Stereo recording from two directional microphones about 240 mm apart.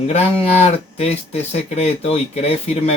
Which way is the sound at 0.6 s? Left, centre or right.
Left.